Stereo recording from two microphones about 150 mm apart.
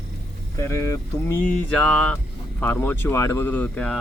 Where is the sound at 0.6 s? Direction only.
20° left (ahead or behind).